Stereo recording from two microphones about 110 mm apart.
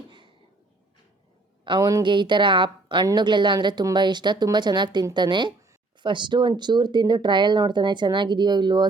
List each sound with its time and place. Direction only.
1.6 s speech: 40° right (ahead or behind)